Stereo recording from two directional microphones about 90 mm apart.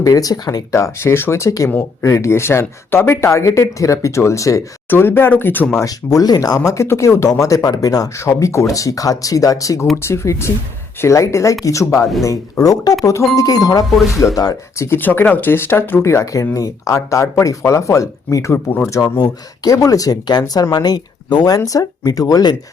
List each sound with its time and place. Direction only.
0.0 s speech: 40° left (ahead or behind)
0.8 s speech: 25° left (ahead or behind)
4.9 s speech: 25° left (ahead or behind)
5.7 s speech: 40° left (ahead or behind)
6.6 s speech: 30° left (ahead or behind)
14.8 s speech: 25° left (ahead or behind)
18.5 s speech: 20° left (ahead or behind)
18.9 s speech: 35° left (ahead or behind)